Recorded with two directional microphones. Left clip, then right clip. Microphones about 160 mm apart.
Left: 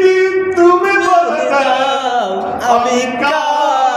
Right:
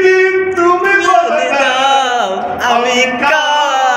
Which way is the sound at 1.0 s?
25° left (ahead or behind).